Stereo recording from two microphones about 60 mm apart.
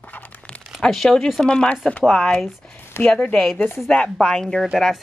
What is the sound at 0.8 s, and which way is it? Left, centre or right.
A woman's voice, centre.